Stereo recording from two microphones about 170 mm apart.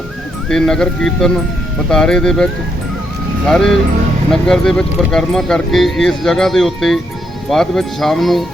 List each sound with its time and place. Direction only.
0.4 s speech: 5° left (ahead or behind)